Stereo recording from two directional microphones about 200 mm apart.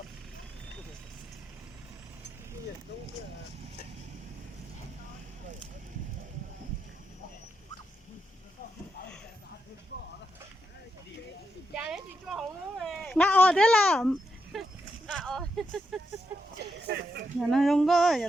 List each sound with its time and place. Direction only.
11.7 s a sound: 5° right (ahead or behind)
16.8 s speech: 55° right (ahead or behind)
17.5 s speech: centre (ahead or behind)